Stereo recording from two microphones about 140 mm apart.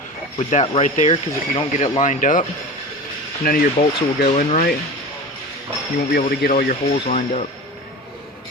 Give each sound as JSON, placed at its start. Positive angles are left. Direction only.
{"t": 0.3, "sound": "speech", "side_deg": 45}
{"t": 3.4, "sound": "speech", "side_deg": 90}
{"t": 4.3, "sound": "speech", "side_deg": 55}
{"t": 6.1, "sound": "speech", "side_deg": 80}